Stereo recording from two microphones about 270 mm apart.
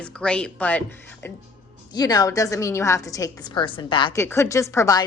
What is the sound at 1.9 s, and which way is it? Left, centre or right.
A woman's voice, centre.